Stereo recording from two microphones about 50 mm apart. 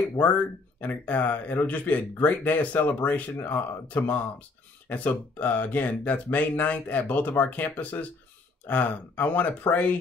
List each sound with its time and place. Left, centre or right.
0.2 s speech: left